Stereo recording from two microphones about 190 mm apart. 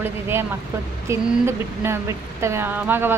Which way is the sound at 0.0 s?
10° right (ahead or behind).